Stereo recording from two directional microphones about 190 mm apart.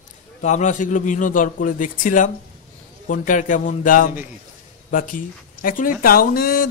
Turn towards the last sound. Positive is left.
turn(degrees=50)  # may be behind; listen again after turning